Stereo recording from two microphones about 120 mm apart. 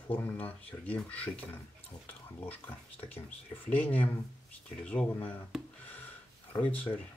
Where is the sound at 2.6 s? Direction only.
15° left (ahead or behind).